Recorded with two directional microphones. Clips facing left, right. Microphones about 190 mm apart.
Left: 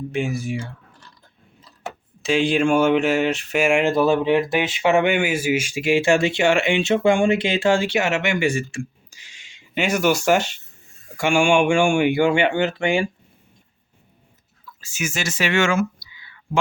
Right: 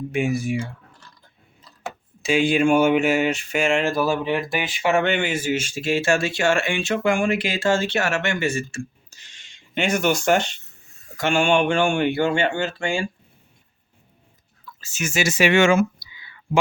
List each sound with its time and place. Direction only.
0.1 s speech: 10° right (ahead or behind)
2.2 s speech: centre (ahead or behind); by 8.6 s 15° left (ahead or behind)
8.7 s a sound: 15° left (ahead or behind)
11.2 s speech: 10° left (ahead or behind)
14.8 s speech: 10° left (ahead or behind)
15.1 s speech: 10° right (ahead or behind)